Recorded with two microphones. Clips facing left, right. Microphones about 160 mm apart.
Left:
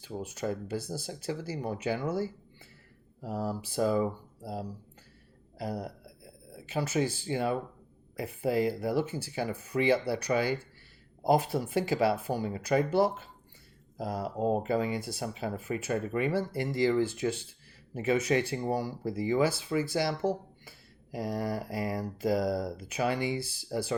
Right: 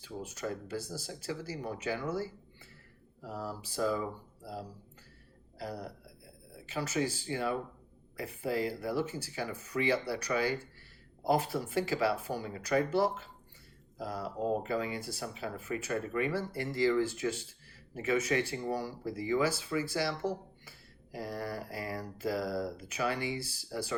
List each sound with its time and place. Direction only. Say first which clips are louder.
0.3 s speech: left 4 dB; 20° left (ahead or behind)
3.3 s speech: left 6 dB; 20° left (ahead or behind)